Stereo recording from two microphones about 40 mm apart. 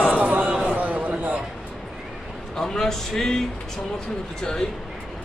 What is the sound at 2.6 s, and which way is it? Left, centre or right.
A man's voice, centre.